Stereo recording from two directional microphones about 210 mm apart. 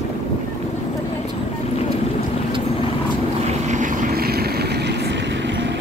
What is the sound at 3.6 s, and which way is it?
Vehicle, 35° right (ahead or behind).